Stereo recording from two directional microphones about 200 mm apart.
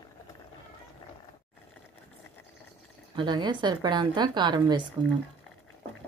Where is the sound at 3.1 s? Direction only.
20° right (ahead or behind).